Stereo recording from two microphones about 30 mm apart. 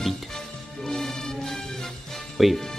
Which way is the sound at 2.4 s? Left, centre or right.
Centre.